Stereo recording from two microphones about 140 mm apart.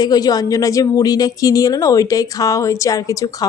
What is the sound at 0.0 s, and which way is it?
A woman's voice, 30° left (ahead or behind).